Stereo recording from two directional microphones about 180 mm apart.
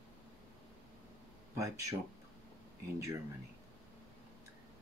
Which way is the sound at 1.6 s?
20° right (ahead or behind).